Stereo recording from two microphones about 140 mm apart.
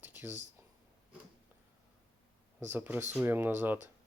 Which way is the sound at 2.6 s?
15° right (ahead or behind).